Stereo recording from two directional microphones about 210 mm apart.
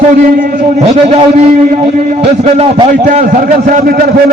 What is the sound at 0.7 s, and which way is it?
A man's voice, 30° right (ahead or behind).